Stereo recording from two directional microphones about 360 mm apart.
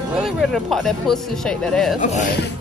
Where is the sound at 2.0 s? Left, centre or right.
Centre.